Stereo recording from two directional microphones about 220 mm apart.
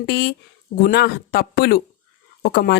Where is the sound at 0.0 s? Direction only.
50° left (ahead or behind).